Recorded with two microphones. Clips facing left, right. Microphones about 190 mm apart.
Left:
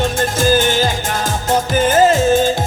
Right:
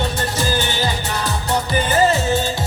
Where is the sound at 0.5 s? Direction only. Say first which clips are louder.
Left 7 dB; 90° left.